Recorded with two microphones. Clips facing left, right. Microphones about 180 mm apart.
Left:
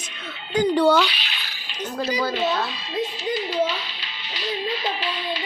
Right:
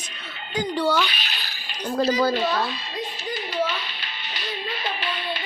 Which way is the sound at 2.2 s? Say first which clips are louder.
Right 3 dB; 45° right (ahead or behind).